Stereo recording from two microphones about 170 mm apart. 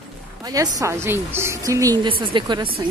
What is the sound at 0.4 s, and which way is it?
A woman's voice, 20° right (ahead or behind).